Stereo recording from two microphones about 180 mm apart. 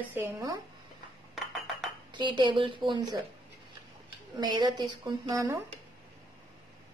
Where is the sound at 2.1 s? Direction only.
25° right (ahead or behind).